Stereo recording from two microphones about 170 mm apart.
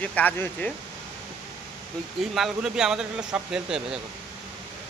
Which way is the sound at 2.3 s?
5° right (ahead or behind).